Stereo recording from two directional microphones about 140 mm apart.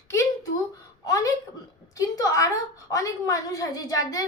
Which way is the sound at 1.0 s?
25° left (ahead or behind).